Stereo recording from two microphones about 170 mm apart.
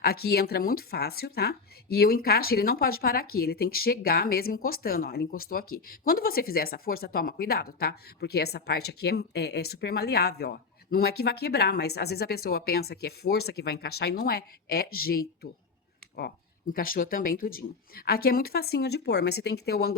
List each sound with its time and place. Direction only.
0.0 s speech: 65° left (ahead or behind)